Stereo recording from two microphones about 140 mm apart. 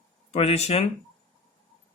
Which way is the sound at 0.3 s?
50° left (ahead or behind).